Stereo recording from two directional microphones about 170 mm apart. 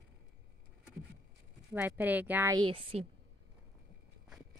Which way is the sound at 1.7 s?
10° right (ahead or behind).